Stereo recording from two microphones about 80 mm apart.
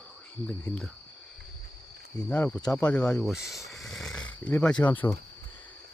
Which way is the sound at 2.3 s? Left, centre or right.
Centre.